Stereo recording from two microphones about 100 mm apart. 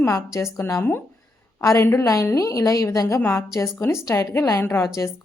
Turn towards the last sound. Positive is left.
turn(degrees=25)  # may be behind; listen again after turning